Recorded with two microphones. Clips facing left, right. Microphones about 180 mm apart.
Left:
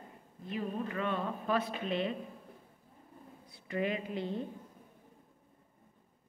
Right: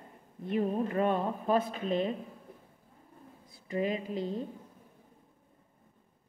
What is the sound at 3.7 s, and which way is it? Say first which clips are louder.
Speech: right 2 dB; 35° right (ahead or behind).